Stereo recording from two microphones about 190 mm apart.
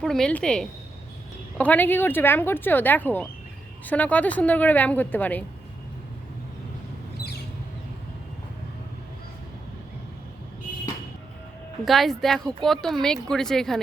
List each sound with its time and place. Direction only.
0.0 s a woman's voice: centre (ahead or behind)
7.2 s a sound: 55° left (ahead or behind)
11.9 s a woman's voice: centre (ahead or behind)